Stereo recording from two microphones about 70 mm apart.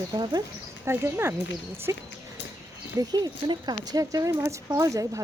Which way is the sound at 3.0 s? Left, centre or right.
Right.